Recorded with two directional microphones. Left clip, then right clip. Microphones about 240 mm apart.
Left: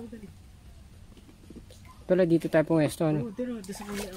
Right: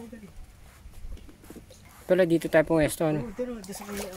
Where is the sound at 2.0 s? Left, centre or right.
Centre.